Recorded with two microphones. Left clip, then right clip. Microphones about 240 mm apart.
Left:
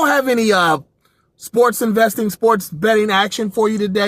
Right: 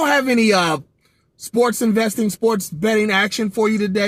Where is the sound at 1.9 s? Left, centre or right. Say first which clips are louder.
Left 4 dB; left.